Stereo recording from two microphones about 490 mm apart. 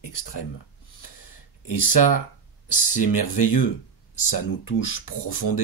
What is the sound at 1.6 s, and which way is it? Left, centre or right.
Speech, left.